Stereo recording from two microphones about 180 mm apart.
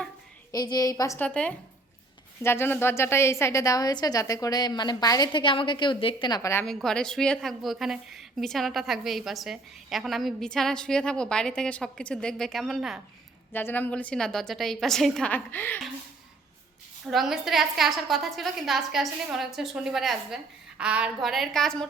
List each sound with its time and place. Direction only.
0.5 s a woman's voice: 20° left (ahead or behind)
6.7 s a woman's voice: 5° left (ahead or behind)
13.5 s a woman's voice: 10° left (ahead or behind)
17.1 s a woman's voice: centre (ahead or behind)